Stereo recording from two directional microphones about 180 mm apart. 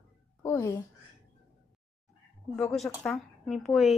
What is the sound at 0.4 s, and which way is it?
Speech, 15° left (ahead or behind).